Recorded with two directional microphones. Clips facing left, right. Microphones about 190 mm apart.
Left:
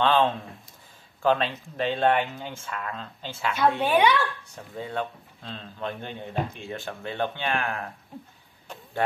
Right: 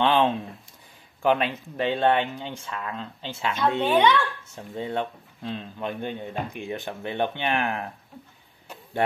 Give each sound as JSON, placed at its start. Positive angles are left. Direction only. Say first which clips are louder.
{"t": 0.0, "sound": "speech", "louder": "right 1 dB", "side_deg": -15}
{"t": 3.8, "sound": "a child's voice", "louder": "right 3 dB", "side_deg": 10}
{"t": 4.7, "sound": "speech", "louder": "right 3 dB", "side_deg": -25}